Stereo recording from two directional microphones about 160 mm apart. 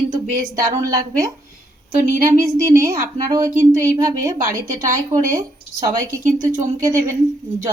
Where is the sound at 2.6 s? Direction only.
20° right (ahead or behind).